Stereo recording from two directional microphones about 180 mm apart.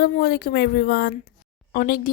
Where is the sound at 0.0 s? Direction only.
60° left (ahead or behind).